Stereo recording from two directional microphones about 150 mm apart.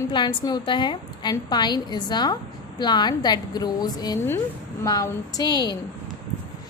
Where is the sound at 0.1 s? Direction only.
30° left (ahead or behind).